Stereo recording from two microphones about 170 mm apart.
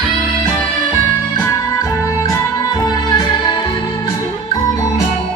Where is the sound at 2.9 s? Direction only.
25° left (ahead or behind).